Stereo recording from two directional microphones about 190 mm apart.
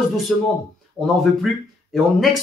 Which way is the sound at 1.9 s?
Centre (ahead or behind).